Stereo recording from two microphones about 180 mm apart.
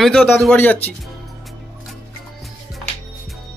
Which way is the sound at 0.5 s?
10° left (ahead or behind).